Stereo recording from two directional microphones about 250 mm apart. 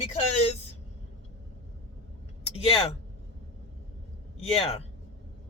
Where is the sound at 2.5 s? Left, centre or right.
Left.